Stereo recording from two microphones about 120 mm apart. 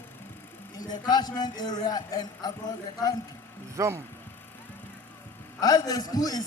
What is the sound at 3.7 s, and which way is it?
Speech, 25° right (ahead or behind).